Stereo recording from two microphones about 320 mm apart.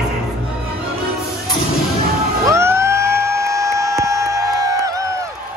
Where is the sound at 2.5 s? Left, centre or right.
Centre.